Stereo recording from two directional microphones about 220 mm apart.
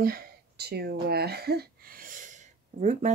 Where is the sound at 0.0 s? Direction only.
45° right (ahead or behind).